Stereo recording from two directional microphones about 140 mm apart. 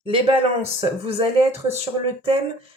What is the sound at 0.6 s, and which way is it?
Speech, 45° right (ahead or behind).